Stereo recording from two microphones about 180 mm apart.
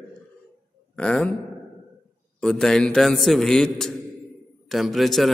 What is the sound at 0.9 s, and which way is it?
Speech, 5° left (ahead or behind).